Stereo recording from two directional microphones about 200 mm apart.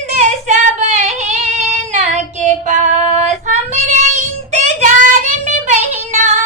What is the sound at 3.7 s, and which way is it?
Child singing, 35° right (ahead or behind).